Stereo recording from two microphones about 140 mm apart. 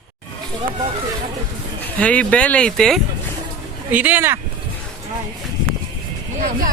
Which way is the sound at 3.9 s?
10° right (ahead or behind).